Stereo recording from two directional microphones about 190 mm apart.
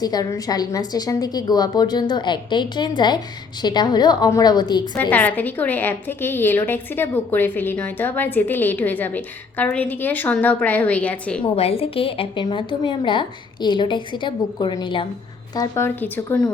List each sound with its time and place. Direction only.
0.0 s a woman's voice: 20° left (ahead or behind)
5.1 s a woman's voice: 10° left (ahead or behind)
11.4 s a woman's voice: 30° left (ahead or behind); by 16.5 s 10° left (ahead or behind)